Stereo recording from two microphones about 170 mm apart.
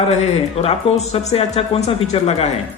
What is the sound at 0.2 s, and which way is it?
Speech, 40° left (ahead or behind).